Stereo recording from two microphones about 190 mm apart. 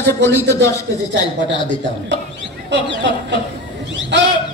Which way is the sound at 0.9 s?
90° right.